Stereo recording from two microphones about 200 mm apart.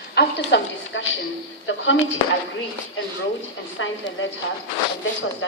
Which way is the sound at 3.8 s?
70° left (ahead or behind).